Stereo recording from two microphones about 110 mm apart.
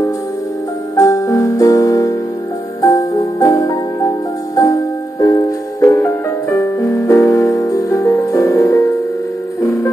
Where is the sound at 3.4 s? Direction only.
30° left (ahead or behind).